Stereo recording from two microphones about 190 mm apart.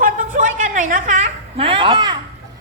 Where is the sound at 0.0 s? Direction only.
45° right (ahead or behind); by 2.1 s 25° right (ahead or behind).